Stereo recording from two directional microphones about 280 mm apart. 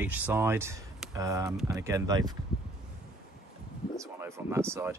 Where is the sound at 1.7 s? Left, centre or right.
Centre.